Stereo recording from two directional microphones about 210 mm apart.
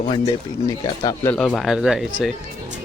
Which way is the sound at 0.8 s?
20° left (ahead or behind).